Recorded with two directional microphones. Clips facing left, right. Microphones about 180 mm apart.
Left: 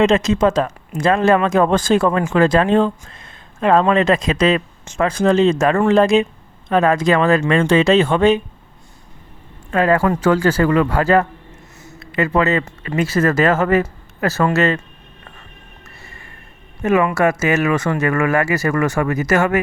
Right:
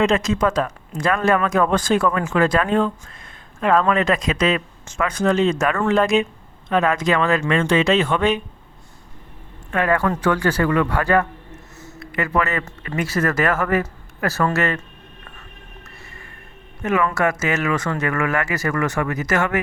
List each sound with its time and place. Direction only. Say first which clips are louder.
0.0 s speech: left 4 dB; 25° left (ahead or behind)
9.7 s speech: left 4 dB; 30° left (ahead or behind)
16.8 s speech: left 4 dB; 25° left (ahead or behind)